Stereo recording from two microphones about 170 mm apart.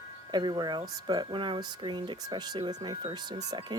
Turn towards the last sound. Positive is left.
turn(degrees=-25)  # may be behind; listen again after turning